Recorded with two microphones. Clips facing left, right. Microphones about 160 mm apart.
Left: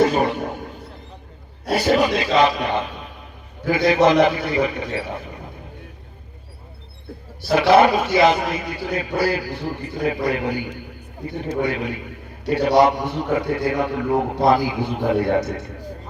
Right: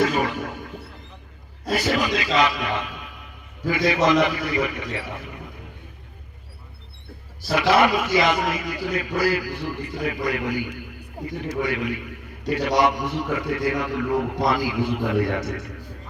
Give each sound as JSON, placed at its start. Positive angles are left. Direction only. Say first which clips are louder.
{"t": 0.0, "sound": "a sound", "louder": "left 4 dB", "side_deg": 30}
{"t": 1.7, "sound": "a man's voice", "louder": "left 5 dB", "side_deg": 30}
{"t": 3.9, "sound": "a man's voice", "louder": "left 5 dB", "side_deg": 30}
{"t": 7.7, "sound": "a man's voice", "louder": "left 4 dB", "side_deg": 30}